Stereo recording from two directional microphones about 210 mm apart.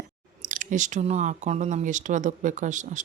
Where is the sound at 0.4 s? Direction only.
40° right (ahead or behind).